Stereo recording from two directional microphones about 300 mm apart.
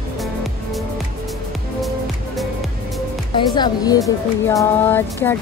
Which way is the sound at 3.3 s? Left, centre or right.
Centre.